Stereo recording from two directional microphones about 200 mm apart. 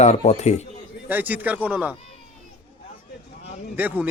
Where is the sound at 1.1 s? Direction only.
10° right (ahead or behind).